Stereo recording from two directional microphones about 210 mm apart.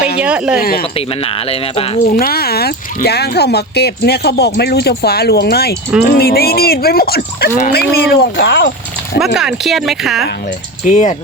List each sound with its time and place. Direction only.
0.2 s speech: 5° right (ahead or behind)
0.6 s speech: 45° left (ahead or behind)
0.9 s speech: 25° left (ahead or behind)
2.1 s speech: 45° left (ahead or behind)
9.2 s speech: 5° right (ahead or behind)
10.8 s speech: 35° left (ahead or behind)